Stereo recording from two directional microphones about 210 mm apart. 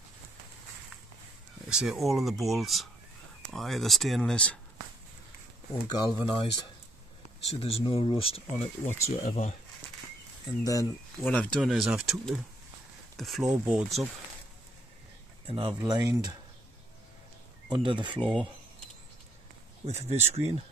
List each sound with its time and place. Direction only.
1.7 s speech: centre (ahead or behind)
5.9 s speech: 20° left (ahead or behind)
7.5 s speech: 25° left (ahead or behind)
8.8 s speech: 15° left (ahead or behind)
9.1 s speech: 35° left (ahead or behind)
10.4 s speech: 15° left (ahead or behind)
11.1 s speech: 5° left (ahead or behind)
15.4 s speech: 25° right (ahead or behind)
17.6 s speech: 20° right (ahead or behind)
18.2 s speech: 5° left (ahead or behind)
19.9 s speech: 30° right (ahead or behind)